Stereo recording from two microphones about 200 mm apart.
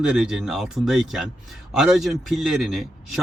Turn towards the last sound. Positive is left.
turn(degrees=0)  # may be behind; listen again after turning